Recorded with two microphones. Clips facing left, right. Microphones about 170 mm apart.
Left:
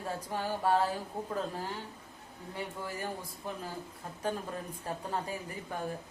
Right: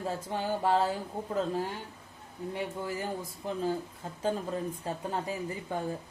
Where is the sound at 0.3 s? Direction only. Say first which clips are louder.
Right 1 dB; 25° right (ahead or behind).